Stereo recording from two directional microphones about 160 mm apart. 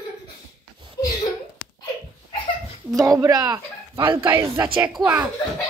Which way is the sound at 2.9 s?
20° right (ahead or behind).